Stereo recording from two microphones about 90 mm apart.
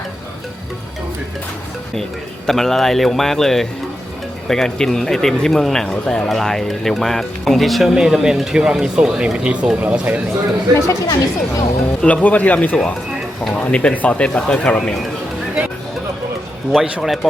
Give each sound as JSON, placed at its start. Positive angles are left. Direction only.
{"t": 2.5, "sound": "speech", "side_deg": 5}
{"t": 10.8, "sound": "speech", "side_deg": 35}
{"t": 12.0, "sound": "speech", "side_deg": 15}
{"t": 16.7, "sound": "speech", "side_deg": -5}